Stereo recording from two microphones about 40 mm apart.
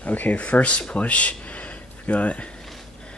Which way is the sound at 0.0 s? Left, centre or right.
Left.